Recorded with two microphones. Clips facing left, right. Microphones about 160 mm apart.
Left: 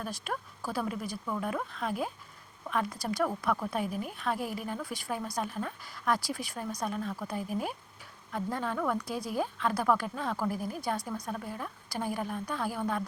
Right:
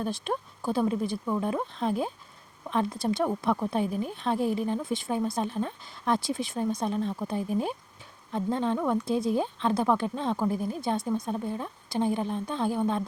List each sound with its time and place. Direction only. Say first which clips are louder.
0.0 s a woman's voice: right 6 dB; 25° right (ahead or behind)